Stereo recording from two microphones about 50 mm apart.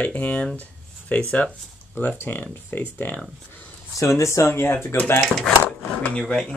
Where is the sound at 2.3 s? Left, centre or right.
Left.